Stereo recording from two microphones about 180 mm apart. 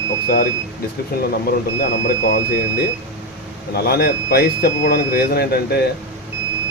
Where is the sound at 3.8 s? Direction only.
60° left (ahead or behind).